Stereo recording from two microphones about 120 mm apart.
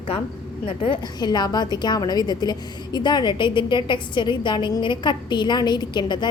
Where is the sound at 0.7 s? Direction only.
45° left (ahead or behind).